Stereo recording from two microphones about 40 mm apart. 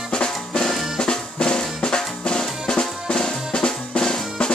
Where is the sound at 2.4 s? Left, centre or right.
Centre.